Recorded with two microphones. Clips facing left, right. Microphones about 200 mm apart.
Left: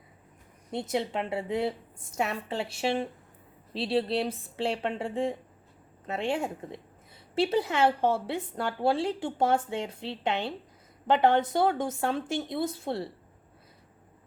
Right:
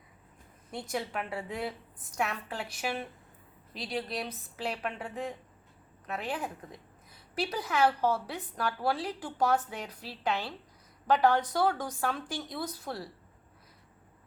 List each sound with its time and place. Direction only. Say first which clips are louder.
0.7 s a woman's voice: left 5 dB; 25° left (ahead or behind)